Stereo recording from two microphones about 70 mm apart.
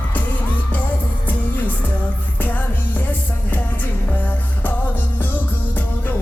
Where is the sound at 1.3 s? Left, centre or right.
Left.